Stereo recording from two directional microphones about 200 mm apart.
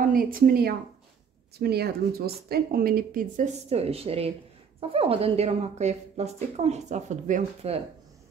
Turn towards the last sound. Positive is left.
turn(degrees=-30)  # may be behind; listen again after turning